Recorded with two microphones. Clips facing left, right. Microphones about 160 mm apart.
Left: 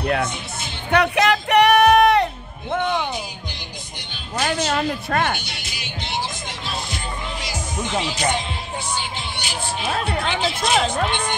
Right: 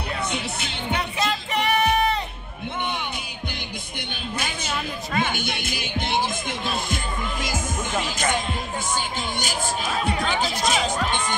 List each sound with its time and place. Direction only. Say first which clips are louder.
0.9 s music: left 10 dB; 70° left (ahead or behind)
4.4 s a sound: left 10 dB; 55° left (ahead or behind)
5.3 s speech: right 2 dB; 50° right (ahead or behind)
7.4 s music: even; 50° right (ahead or behind)
9.4 s speech: left 1 dB; 45° right (ahead or behind)
10.7 s speech: left 6 dB; 50° left (ahead or behind)